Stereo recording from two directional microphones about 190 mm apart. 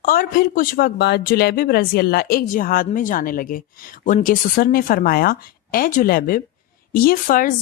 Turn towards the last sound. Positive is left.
turn(degrees=45)  # may be behind; listen again after turning